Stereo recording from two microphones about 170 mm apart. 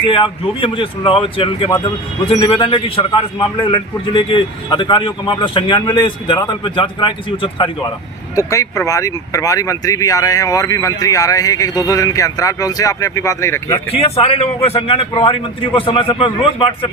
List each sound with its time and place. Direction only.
0.0 s a man's voice: 30° left (ahead or behind)
8.4 s a man's voice: 20° left (ahead or behind)
13.9 s a man's voice: 35° left (ahead or behind)